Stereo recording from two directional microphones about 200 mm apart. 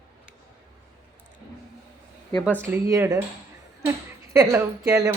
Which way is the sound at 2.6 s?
15° right (ahead or behind).